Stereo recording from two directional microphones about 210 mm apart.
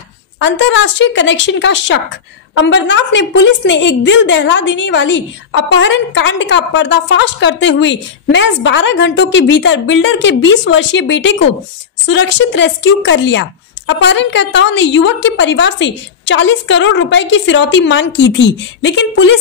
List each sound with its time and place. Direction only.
0.4 s a woman's voice: 60° left (ahead or behind)